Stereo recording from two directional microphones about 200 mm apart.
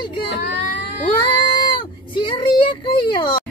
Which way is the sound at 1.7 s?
25° left (ahead or behind).